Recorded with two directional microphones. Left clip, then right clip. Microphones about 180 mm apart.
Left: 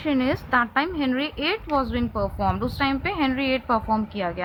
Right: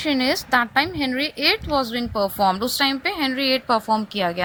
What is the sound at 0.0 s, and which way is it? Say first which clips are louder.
A woman's voice: right 3 dB; 45° right (ahead or behind).